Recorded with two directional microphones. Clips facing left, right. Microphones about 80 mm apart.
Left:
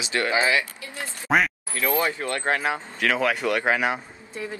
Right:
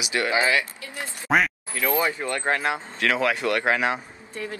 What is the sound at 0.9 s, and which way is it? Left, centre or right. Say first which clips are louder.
Speech: even; centre.